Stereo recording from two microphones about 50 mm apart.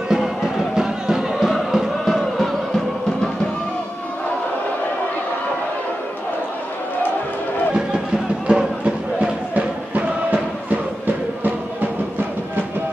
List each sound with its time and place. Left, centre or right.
0.1 s music: centre
8.5 s music: centre; by 11.9 s right